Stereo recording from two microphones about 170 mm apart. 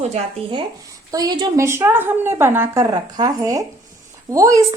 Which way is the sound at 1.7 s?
15° right (ahead or behind).